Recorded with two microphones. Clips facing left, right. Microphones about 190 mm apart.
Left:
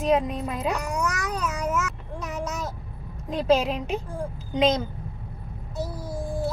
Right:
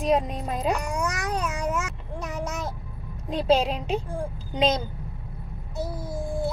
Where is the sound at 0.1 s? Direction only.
35° right (ahead or behind).